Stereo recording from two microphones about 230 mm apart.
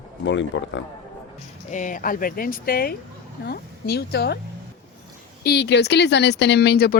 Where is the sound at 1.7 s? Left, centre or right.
Left.